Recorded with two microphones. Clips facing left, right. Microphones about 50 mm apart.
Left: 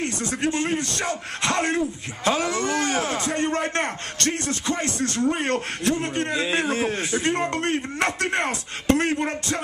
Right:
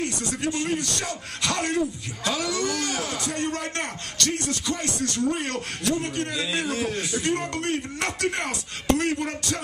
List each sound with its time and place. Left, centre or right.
0.0 s a man's voice: left